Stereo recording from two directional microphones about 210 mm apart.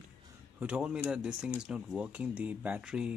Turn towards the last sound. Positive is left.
turn(degrees=-5)  # may be behind; listen again after turning